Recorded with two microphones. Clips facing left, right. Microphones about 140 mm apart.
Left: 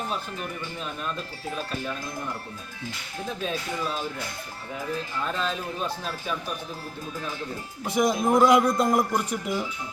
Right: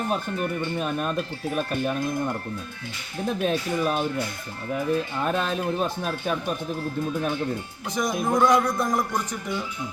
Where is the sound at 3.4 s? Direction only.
55° right (ahead or behind).